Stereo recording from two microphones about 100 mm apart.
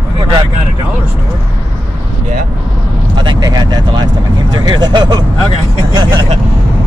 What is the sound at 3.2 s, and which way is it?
Speech, 45° right (ahead or behind).